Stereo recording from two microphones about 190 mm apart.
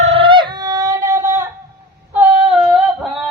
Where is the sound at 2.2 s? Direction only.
5° right (ahead or behind).